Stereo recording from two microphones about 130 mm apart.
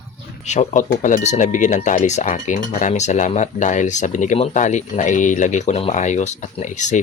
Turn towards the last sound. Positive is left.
turn(degrees=70)  # may be behind; listen again after turning